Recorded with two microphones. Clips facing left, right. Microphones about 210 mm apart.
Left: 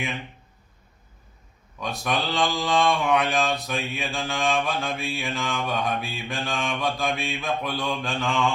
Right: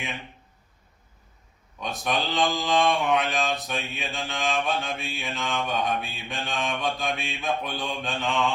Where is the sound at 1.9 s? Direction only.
Centre (ahead or behind).